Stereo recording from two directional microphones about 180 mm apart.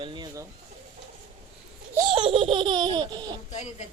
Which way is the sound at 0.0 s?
25° right (ahead or behind).